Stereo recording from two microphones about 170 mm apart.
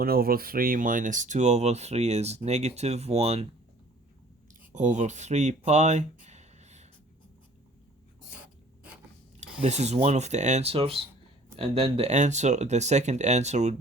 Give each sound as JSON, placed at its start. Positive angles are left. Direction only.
{"t": 0.0, "sound": "speech", "side_deg": -60}
{"t": 4.7, "sound": "speech", "side_deg": -45}
{"t": 8.4, "sound": "writing", "side_deg": -5}
{"t": 9.6, "sound": "speech", "side_deg": -40}